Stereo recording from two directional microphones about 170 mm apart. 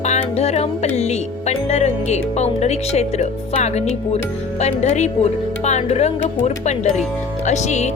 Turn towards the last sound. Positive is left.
turn(degrees=45)  # may be behind; listen again after turning